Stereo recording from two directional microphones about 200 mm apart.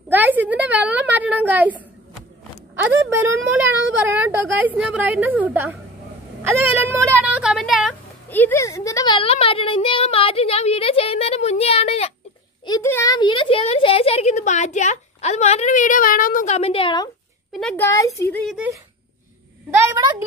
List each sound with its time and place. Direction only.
0.1 s a sound: 10° right (ahead or behind)
4.0 s a woman's voice: 10° right (ahead or behind)
8.3 s a woman's voice: 10° left (ahead or behind); by 12.1 s 30° left (ahead or behind)
12.6 s speech: 15° left (ahead or behind)
17.5 s a child's voice: centre (ahead or behind)
17.8 s speech: 15° left (ahead or behind)
18.4 s speech: centre (ahead or behind)
19.8 s a woman's voice: 15° right (ahead or behind)